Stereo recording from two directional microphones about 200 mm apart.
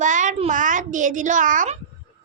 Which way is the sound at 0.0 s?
40° right (ahead or behind).